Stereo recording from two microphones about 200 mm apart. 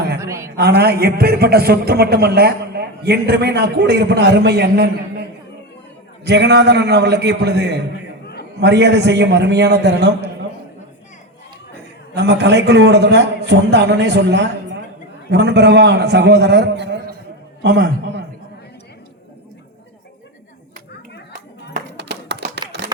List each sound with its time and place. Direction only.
0.2 s a woman's voice: 15° right (ahead or behind)
0.5 s a man's voice: 55° right (ahead or behind)
6.2 s a man's voice: 55° right (ahead or behind)
12.1 s a man's voice: 60° right (ahead or behind)
21.9 s music: 60° right (ahead or behind)
22.7 s a sound: 60° right (ahead or behind)